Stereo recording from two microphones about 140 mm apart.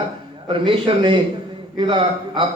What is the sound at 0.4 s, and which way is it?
A man's voice, 40° right (ahead or behind).